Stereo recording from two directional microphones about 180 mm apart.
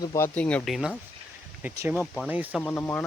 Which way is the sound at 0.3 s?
5° left (ahead or behind).